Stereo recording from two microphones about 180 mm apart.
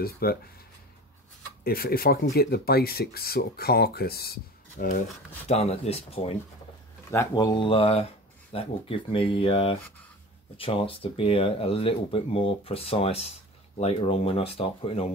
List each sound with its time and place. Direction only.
0.0 s speech: 55° left (ahead or behind)
1.6 s speech: 55° left (ahead or behind)
5.5 s speech: 35° left (ahead or behind)
7.1 s speech: 20° left (ahead or behind)